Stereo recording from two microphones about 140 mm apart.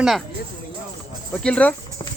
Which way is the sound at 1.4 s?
10° left (ahead or behind).